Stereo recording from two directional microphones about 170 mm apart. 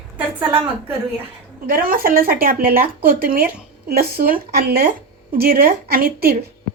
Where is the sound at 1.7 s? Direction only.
55° right (ahead or behind).